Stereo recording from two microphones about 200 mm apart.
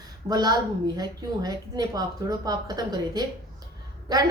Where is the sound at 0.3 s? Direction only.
20° right (ahead or behind).